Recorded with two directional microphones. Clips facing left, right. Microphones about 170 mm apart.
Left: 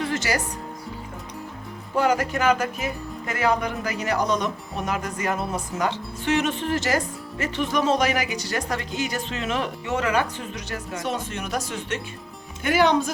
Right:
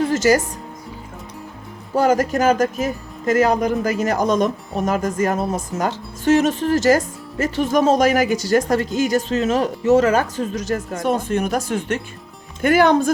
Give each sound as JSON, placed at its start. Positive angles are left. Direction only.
{"t": 0.0, "sound": "music", "side_deg": -45}
{"t": 2.0, "sound": "speech", "side_deg": -45}